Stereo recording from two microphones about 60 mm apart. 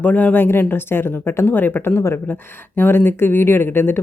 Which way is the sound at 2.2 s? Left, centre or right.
Left.